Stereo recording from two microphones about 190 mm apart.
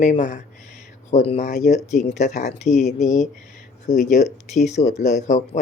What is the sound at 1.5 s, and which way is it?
Speech, 50° left (ahead or behind).